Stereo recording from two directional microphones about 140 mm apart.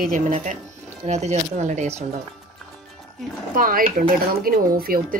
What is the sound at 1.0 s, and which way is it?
Speech, 55° right (ahead or behind).